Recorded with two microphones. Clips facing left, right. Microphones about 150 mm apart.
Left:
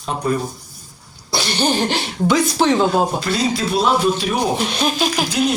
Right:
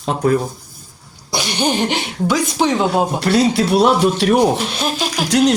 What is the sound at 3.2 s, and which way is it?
Speech, 70° right (ahead or behind).